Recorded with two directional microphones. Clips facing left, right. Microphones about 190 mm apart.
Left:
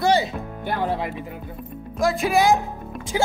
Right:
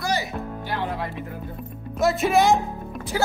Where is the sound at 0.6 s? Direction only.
50° left (ahead or behind).